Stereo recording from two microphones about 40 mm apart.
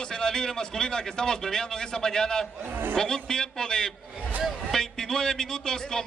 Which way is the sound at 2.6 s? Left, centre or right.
Right.